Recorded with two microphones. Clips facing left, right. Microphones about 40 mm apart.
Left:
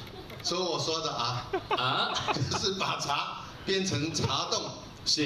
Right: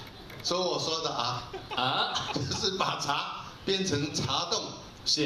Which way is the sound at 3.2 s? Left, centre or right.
Right.